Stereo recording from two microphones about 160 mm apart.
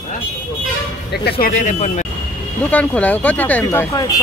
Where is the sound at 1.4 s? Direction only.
50° left (ahead or behind).